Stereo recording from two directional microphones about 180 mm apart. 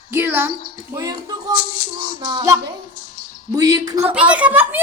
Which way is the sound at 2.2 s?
20° right (ahead or behind).